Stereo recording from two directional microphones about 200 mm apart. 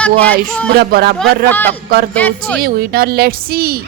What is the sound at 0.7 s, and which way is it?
Speech, 50° right (ahead or behind).